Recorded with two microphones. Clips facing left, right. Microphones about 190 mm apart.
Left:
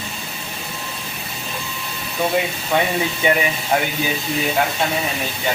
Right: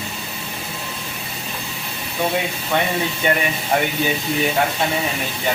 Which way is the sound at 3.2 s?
10° left (ahead or behind).